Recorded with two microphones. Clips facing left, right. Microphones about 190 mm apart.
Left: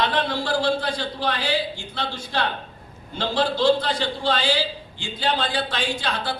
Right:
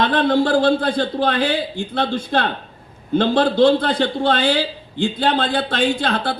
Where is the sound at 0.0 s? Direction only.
55° right (ahead or behind).